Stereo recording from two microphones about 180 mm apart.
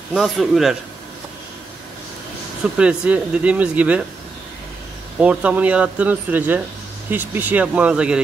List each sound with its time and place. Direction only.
0.1 s speech: centre (ahead or behind)
2.6 s speech: 5° right (ahead or behind)
5.2 s speech: 5° right (ahead or behind)